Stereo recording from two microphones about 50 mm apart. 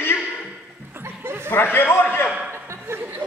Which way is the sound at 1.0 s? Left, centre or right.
Right.